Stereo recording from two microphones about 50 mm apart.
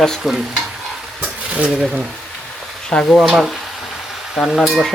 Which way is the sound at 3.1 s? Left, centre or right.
Centre.